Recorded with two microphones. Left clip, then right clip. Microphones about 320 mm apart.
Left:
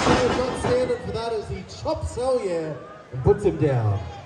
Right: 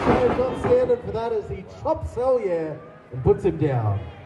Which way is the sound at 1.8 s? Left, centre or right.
Right.